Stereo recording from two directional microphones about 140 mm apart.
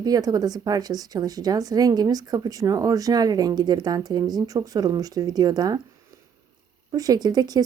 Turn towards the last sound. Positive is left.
turn(degrees=-30)  # may be behind; listen again after turning